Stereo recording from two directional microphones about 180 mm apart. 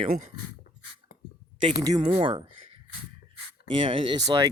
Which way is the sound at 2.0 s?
30° right (ahead or behind).